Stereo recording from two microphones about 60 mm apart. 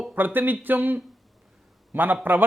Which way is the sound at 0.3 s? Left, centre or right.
Right.